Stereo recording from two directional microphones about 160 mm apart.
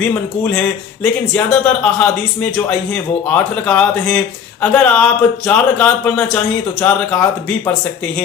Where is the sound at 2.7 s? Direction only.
10° left (ahead or behind).